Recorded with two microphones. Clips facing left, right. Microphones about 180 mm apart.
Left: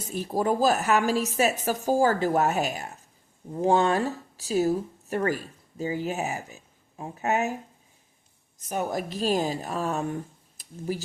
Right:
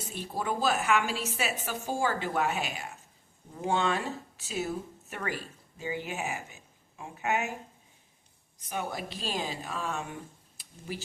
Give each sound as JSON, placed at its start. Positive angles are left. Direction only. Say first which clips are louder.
{"t": 0.1, "sound": "a woman's voice", "louder": "left 8 dB", "side_deg": 40}
{"t": 8.5, "sound": "a woman's voice", "louder": "left 6 dB", "side_deg": 45}